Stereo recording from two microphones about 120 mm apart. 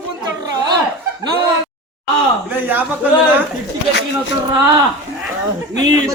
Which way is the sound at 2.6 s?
15° right (ahead or behind).